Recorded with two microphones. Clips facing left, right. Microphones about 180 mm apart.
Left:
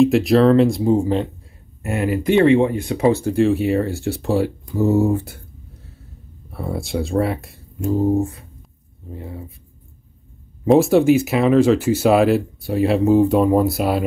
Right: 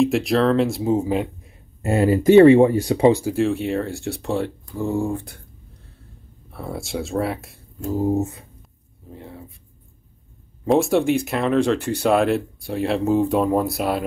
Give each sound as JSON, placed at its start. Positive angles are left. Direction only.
{"t": 0.0, "sound": "speech", "side_deg": 0}
{"t": 1.8, "sound": "speech", "side_deg": -30}
{"t": 3.0, "sound": "speech", "side_deg": -15}
{"t": 3.3, "sound": "speech", "side_deg": 0}
{"t": 6.5, "sound": "speech", "side_deg": 0}
{"t": 8.1, "sound": "speech", "side_deg": -20}
{"t": 9.1, "sound": "speech", "side_deg": 5}
{"t": 10.6, "sound": "speech", "side_deg": 0}